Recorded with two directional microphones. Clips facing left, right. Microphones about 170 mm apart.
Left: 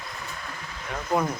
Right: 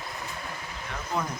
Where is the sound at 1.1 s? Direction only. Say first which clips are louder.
Left 6 dB; 50° left (ahead or behind).